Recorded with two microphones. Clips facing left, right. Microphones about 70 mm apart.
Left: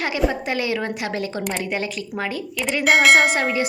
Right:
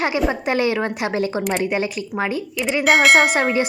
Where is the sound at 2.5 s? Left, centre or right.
Centre.